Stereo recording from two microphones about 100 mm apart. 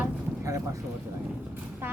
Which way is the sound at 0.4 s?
30° right (ahead or behind).